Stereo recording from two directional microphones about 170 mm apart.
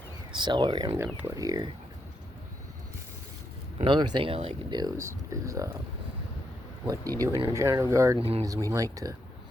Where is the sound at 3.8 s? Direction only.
30° right (ahead or behind).